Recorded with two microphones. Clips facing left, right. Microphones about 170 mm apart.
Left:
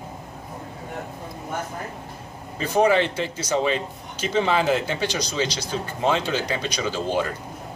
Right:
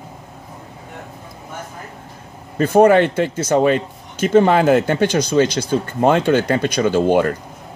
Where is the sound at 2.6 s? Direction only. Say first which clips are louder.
Right 8 dB; 55° right (ahead or behind).